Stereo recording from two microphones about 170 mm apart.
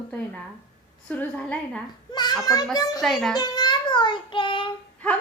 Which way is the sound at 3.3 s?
25° left (ahead or behind).